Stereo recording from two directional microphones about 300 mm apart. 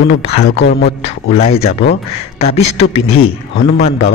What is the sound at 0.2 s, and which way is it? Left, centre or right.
Speech, left.